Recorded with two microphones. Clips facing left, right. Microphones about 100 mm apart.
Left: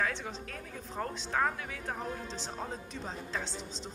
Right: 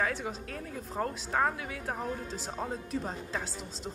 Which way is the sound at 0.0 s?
5° right (ahead or behind).